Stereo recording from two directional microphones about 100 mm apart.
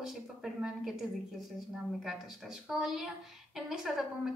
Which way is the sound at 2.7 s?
5° right (ahead or behind).